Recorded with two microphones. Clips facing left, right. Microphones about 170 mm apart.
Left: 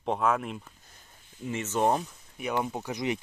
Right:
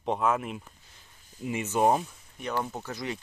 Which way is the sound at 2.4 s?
10° left (ahead or behind).